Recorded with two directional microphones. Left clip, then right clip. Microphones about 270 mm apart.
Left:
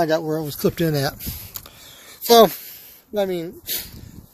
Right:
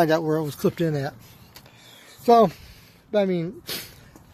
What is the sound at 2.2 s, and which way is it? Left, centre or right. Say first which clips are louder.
Speech: left 4 dB; left.